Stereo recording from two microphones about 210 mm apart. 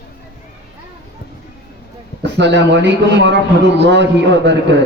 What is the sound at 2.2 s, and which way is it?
A man's voice, 55° right (ahead or behind).